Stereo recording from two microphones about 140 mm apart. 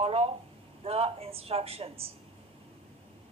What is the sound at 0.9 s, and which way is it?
A man's voice, 45° right (ahead or behind).